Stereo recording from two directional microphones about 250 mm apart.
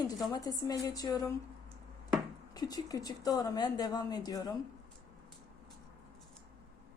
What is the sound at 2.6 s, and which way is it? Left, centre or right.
A woman's voice, centre.